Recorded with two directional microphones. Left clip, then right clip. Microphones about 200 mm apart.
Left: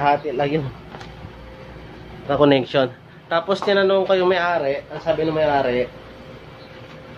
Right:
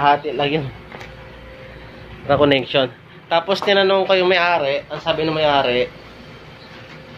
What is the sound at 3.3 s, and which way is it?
A man's voice, 10° left (ahead or behind).